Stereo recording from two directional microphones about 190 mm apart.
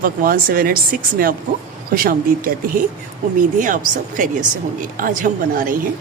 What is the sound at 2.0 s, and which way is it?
A woman's voice, 50° right (ahead or behind).